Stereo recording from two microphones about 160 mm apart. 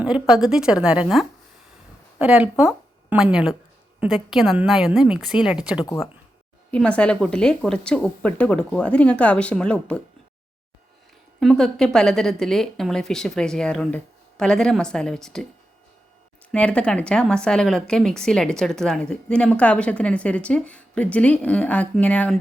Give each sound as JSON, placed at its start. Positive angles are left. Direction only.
{"t": 0.0, "sound": "a woman's voice", "side_deg": -5}
{"t": 5.8, "sound": "speech", "side_deg": 20}
{"t": 6.7, "sound": "a woman's voice", "side_deg": 5}
{"t": 11.3, "sound": "a woman's voice", "side_deg": 0}
{"t": 16.5, "sound": "a woman's voice", "side_deg": 5}